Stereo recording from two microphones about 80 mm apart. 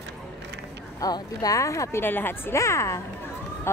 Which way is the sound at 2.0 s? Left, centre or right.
Left.